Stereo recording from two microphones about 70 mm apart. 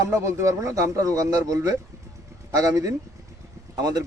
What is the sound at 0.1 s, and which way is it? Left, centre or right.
Speech, right.